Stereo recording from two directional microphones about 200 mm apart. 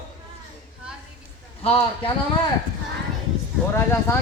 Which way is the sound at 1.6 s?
25° left (ahead or behind).